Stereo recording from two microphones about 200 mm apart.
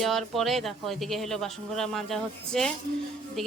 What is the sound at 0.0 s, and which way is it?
Speech, centre (ahead or behind).